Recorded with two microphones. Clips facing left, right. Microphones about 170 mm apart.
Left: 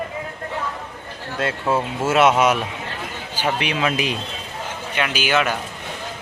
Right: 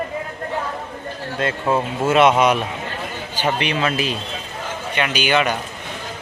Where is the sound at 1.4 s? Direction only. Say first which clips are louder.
Right 1 dB; 10° left (ahead or behind).